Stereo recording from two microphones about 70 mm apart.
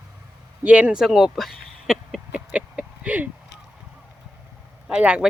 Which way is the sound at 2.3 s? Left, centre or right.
Centre.